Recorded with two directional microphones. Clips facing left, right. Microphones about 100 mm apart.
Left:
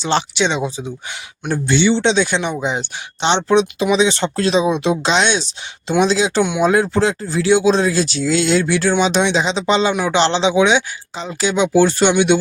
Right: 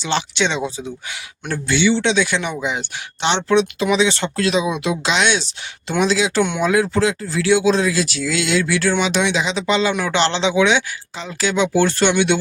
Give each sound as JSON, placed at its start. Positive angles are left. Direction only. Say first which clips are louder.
{"t": 0.0, "sound": "speech", "louder": "left 3 dB", "side_deg": 35}
{"t": 0.3, "sound": "speech", "louder": "left 2 dB", "side_deg": 20}
{"t": 9.9, "sound": "speech", "louder": "left 3 dB", "side_deg": 15}